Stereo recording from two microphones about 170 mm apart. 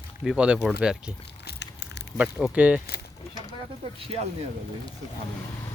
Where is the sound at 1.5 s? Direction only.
80° left.